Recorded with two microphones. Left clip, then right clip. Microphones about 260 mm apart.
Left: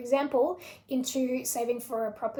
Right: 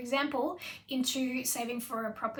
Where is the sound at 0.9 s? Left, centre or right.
Right.